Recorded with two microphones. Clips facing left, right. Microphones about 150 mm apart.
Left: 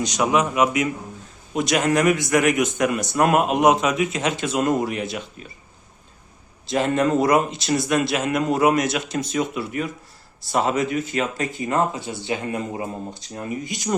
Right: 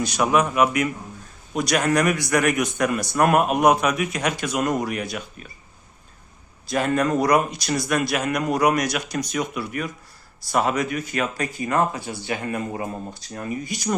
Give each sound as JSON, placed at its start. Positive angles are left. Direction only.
{"t": 0.0, "sound": "speech", "side_deg": 20}
{"t": 6.7, "sound": "speech", "side_deg": 25}